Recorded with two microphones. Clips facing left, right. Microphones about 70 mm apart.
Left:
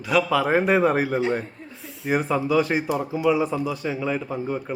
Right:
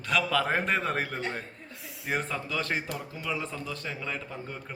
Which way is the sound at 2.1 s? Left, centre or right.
Centre.